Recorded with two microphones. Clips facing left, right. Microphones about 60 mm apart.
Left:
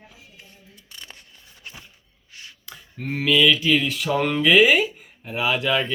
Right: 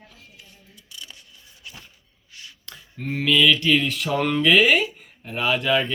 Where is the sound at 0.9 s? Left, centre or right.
Left.